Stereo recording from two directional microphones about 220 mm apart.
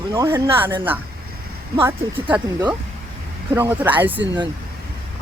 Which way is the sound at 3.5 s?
10° right (ahead or behind).